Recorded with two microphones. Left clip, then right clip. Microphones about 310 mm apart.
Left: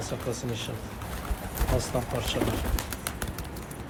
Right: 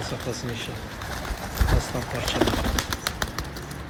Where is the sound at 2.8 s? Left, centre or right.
Right.